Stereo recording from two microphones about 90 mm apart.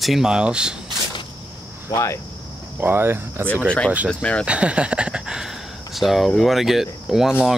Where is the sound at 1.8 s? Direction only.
35° left (ahead or behind).